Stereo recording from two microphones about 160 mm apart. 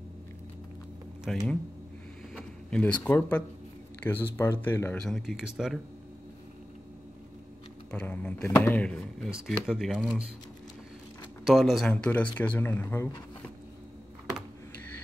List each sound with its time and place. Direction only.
1.3 s speech: 5° left (ahead or behind)
5.0 s speech: centre (ahead or behind)
7.9 s speech: 10° left (ahead or behind)
11.4 s speech: centre (ahead or behind); by 13.1 s 15° left (ahead or behind)